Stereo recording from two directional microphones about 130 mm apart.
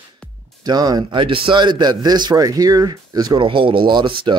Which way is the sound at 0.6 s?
30° right (ahead or behind).